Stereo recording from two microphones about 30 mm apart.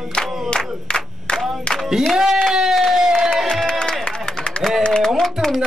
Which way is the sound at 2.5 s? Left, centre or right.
Centre.